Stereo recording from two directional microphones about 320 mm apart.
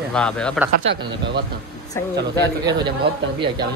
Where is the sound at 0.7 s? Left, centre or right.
Right.